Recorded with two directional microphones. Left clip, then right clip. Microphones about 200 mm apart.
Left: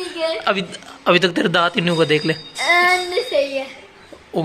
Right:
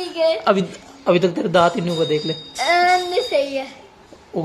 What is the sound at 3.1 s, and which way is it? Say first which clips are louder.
Speech: even; 25° right (ahead or behind).